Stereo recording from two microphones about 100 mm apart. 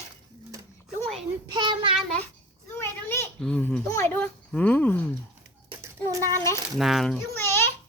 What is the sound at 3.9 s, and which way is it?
Speech, 25° left (ahead or behind).